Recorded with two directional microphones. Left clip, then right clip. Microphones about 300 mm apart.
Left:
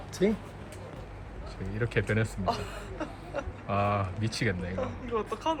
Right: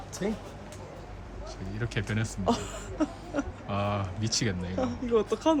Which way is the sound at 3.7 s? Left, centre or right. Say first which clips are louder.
Left 4 dB; centre.